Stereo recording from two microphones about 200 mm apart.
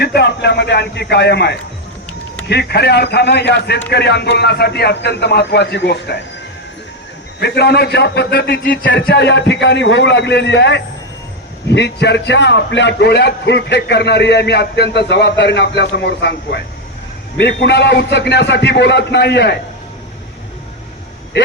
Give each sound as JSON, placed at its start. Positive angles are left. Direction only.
{"t": 0.0, "sound": "a man's voice", "side_deg": 55}
{"t": 7.3, "sound": "a man's voice", "side_deg": 55}